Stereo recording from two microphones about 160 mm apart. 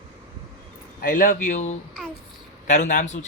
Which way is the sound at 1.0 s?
55° left (ahead or behind).